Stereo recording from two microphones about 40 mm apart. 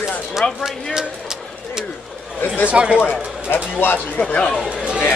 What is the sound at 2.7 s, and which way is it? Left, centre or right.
Speech, right.